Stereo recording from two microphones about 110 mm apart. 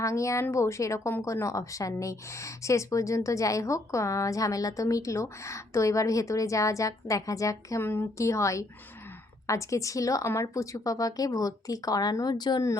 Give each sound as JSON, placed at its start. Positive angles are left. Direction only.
{"t": 0.0, "sound": "a woman's voice", "side_deg": 30}